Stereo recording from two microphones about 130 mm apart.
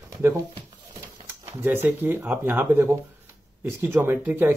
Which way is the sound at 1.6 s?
15° right (ahead or behind).